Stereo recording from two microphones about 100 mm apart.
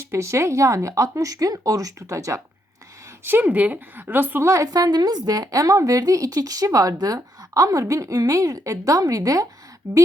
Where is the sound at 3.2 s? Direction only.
20° right (ahead or behind).